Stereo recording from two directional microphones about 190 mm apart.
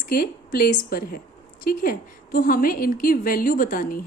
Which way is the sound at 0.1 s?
50° left (ahead or behind).